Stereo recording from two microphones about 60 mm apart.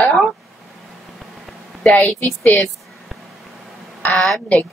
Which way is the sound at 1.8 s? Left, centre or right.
Centre.